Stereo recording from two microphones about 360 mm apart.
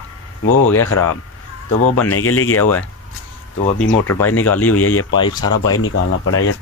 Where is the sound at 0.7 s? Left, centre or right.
Left.